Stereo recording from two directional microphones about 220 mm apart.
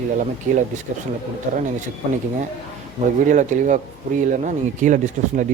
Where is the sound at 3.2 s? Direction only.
35° right (ahead or behind).